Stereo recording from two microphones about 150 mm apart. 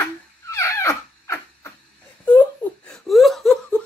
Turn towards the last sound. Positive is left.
turn(degrees=5)  # may be behind; listen again after turning